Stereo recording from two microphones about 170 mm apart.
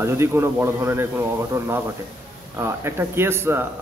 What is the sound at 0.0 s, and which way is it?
Speech, 15° right (ahead or behind).